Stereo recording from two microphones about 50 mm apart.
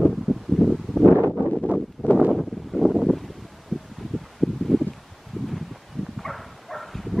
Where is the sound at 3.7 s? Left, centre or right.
Centre.